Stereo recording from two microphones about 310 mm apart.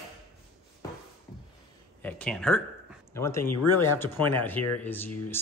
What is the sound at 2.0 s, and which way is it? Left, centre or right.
Speech, centre.